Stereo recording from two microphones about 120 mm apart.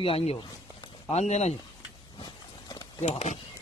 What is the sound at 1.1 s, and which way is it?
Speech, 65° left (ahead or behind).